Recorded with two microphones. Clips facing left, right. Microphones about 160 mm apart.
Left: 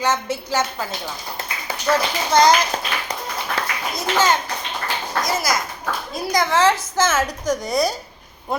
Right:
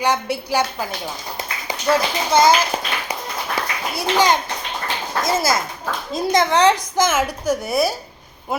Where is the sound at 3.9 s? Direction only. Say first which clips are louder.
Right 2 dB; 15° right (ahead or behind).